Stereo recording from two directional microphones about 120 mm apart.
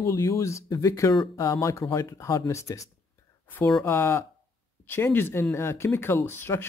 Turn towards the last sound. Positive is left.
turn(degrees=20)  # may be behind; listen again after turning